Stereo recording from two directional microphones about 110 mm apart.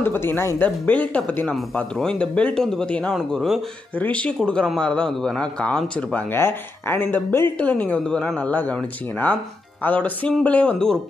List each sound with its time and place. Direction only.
0.0 s speech: 20° left (ahead or behind); by 3.6 s centre (ahead or behind)
3.9 s speech: 15° left (ahead or behind)
6.3 s speech: 20° left (ahead or behind)